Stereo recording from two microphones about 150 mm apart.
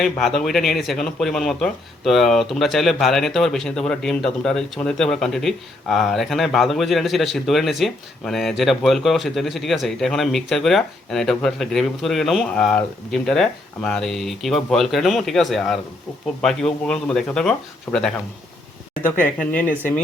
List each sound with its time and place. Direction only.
0.0 s speech: centre (ahead or behind)
17.9 s speech: 15° left (ahead or behind)
19.2 s speech: 10° left (ahead or behind)